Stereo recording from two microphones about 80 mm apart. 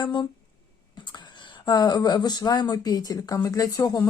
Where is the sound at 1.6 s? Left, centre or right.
Left.